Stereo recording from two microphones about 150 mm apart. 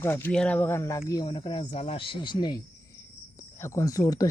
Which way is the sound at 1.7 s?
45° left (ahead or behind).